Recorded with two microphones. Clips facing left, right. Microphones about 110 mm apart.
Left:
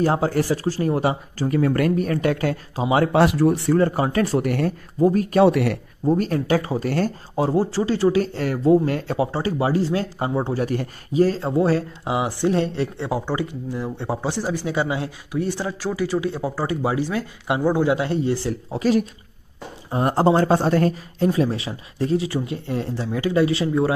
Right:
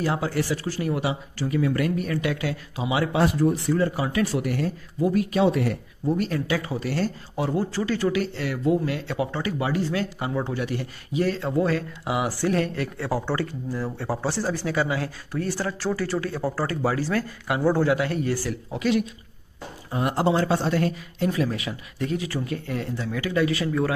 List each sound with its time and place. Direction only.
0.0 s speech: 40° left (ahead or behind)
3.2 s speech: 75° left (ahead or behind)
3.7 s speech: 45° left (ahead or behind)
5.0 s speech: 40° left (ahead or behind)
5.4 s speech: 70° left (ahead or behind)
6.1 s speech: 45° left (ahead or behind); by 8.2 s 30° left (ahead or behind)
8.2 s speech: 40° left (ahead or behind)
9.2 s speech: 30° left (ahead or behind); by 17.9 s 15° left (ahead or behind)
17.9 s speech: 25° left (ahead or behind)
18.5 s speech: 35° left (ahead or behind)
21.3 s speech: 30° left (ahead or behind)